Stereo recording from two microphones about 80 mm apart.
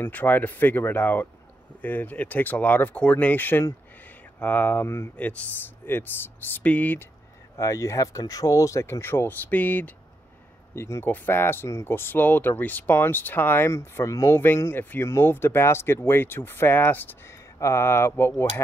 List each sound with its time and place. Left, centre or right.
0.0 s speech: left
4.8 s speech: left
5.1 s speech: centre
7.5 s speech: left
9.5 s speech: left
10.7 s speech: left